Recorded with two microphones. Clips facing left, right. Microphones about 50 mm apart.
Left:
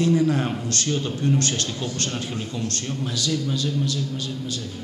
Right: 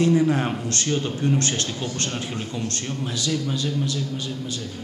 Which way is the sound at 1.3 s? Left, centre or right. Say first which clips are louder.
Even; right.